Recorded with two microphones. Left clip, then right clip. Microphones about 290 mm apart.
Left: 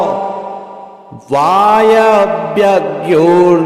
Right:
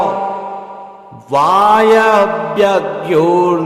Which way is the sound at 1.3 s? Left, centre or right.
Centre.